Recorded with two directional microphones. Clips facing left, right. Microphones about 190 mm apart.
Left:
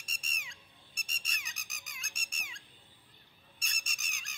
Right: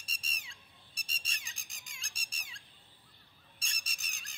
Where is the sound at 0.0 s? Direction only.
35° right (ahead or behind).